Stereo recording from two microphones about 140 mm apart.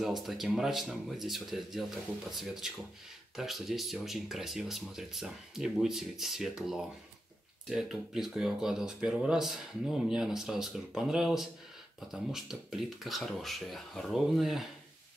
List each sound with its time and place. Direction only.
0.0 s speech: centre (ahead or behind)